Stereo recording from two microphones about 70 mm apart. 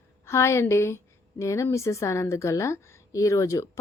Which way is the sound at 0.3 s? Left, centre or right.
Left.